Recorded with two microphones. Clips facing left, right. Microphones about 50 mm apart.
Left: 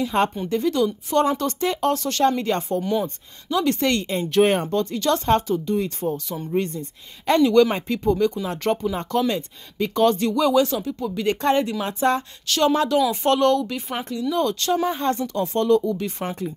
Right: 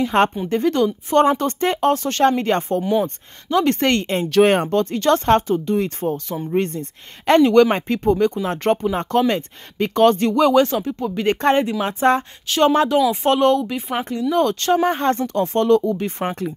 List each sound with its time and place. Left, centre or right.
0.1 s a woman's voice: right
0.5 s speech: right
2.8 s speech: centre
3.4 s speech: right
4.1 s speech: right
4.7 s speech: right; by 14.0 s centre
14.3 s speech: right